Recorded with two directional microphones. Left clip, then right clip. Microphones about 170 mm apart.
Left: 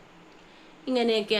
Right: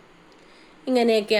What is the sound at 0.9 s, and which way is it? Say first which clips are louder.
Speech: right 5 dB; 35° right (ahead or behind).